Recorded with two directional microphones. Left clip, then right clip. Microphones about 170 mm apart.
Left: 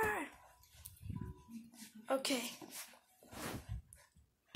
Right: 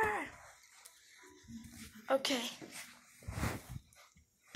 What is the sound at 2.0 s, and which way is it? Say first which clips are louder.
Speech: right 4 dB; 15° right (ahead or behind).